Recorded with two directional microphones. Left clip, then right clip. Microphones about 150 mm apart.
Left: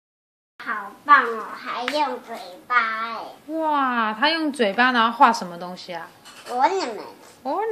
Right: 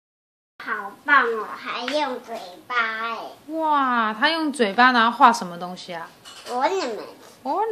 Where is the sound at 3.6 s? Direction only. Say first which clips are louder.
Right 1 dB; 5° right (ahead or behind).